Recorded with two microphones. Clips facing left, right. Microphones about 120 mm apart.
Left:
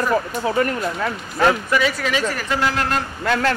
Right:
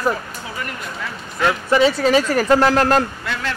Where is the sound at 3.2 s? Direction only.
50° left (ahead or behind).